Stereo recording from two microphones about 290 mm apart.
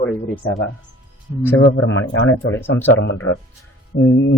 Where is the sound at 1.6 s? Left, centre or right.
Left.